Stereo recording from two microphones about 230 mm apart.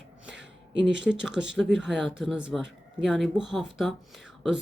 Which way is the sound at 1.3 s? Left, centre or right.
Right.